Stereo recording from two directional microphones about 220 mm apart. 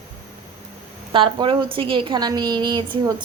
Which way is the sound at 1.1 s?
20° right (ahead or behind).